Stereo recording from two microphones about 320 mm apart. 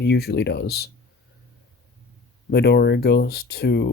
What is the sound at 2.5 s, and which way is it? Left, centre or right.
Speech, left.